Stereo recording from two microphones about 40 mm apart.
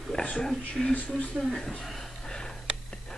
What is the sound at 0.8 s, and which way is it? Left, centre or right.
Speech, centre.